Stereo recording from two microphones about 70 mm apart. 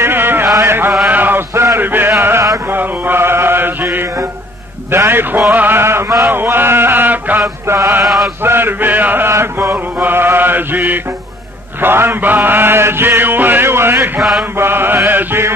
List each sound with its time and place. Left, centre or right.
0.0 s chant: right
1.0 s mantra: right
1.8 s a sound: right
2.7 s chant: right
4.9 s mantra: right
7.6 s mantra: right
8.0 s chant: centre
8.4 s mantra: right